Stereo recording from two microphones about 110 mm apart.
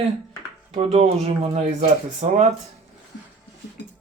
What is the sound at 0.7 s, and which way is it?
Speech, 75° right (ahead or behind).